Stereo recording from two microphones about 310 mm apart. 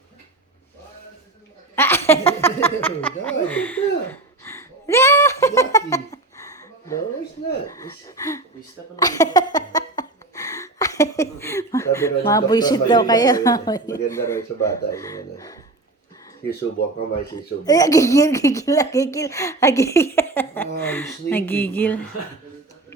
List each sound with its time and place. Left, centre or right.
1.7 s laughter: centre
2.0 s a sound: centre
7.7 s speech: centre
9.0 s a sound: centre
16.8 s speech: left
17.7 s speech: centre